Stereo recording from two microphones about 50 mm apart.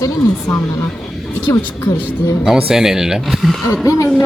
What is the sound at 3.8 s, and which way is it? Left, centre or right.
Speech, left.